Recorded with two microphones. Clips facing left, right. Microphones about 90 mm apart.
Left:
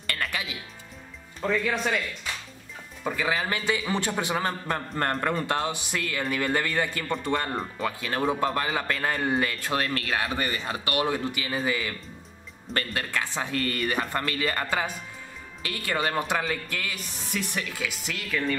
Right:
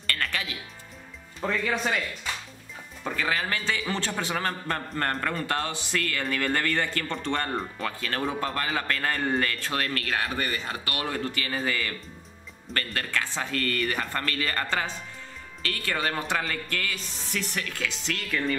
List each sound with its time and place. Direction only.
0.0 s music: 15° left (ahead or behind)
1.4 s a man's voice: centre (ahead or behind)